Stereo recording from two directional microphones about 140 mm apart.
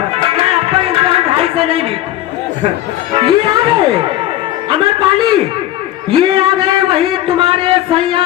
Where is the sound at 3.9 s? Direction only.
40° right (ahead or behind).